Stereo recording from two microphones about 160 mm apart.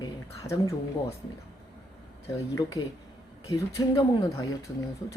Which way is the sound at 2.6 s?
25° left (ahead or behind).